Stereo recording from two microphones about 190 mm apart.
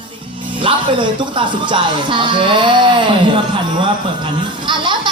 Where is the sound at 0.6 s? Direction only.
25° right (ahead or behind).